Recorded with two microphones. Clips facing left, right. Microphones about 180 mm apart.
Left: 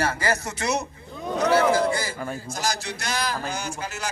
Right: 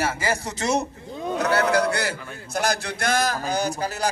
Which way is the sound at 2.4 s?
60° right (ahead or behind).